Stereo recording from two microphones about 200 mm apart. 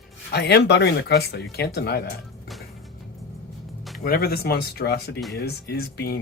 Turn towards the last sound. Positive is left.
turn(degrees=50)  # may be behind; listen again after turning